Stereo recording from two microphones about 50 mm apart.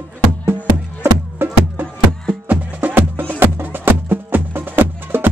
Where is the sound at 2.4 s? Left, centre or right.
Right.